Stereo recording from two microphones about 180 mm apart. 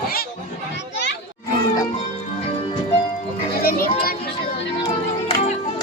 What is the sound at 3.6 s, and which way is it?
Children playing, 55° left (ahead or behind).